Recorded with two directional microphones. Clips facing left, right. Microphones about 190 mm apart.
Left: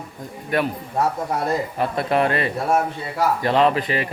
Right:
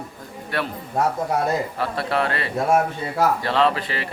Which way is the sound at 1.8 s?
20° left (ahead or behind).